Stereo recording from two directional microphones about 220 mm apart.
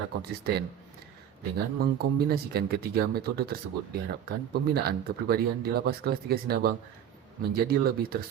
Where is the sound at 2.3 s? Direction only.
45° right (ahead or behind).